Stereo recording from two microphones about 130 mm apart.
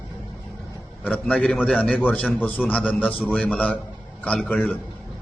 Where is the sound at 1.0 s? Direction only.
10° left (ahead or behind).